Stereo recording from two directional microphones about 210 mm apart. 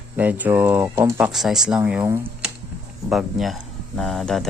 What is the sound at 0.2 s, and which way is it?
Speech, 10° right (ahead or behind).